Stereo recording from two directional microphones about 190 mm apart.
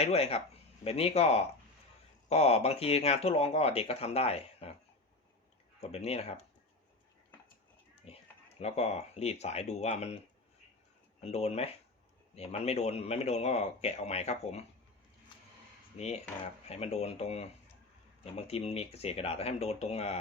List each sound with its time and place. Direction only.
0.0 s speech: 35° left (ahead or behind)
5.8 s speech: 35° left (ahead or behind)
8.0 s speech: 35° left (ahead or behind)
11.2 s speech: 35° left (ahead or behind)
16.0 s speech: 35° left (ahead or behind)